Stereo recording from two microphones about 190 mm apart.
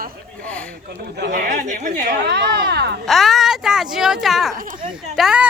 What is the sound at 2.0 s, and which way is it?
Speech, 60° right (ahead or behind).